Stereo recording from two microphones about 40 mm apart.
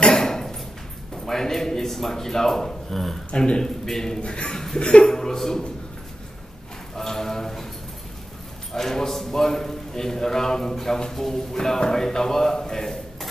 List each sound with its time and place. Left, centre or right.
0.1 s a sound: centre
1.1 s a man's voice: centre
3.3 s a man's voice: left
3.8 s a man's voice: centre
4.2 s a man's voice: left
4.5 s chuckle: centre
4.7 s a man's voice: left
7.0 s a sound: centre
8.7 s a man's voice: centre